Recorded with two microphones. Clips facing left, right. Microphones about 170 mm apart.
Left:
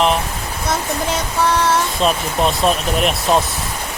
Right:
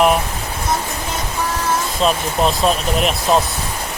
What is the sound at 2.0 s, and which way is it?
Speech, centre (ahead or behind).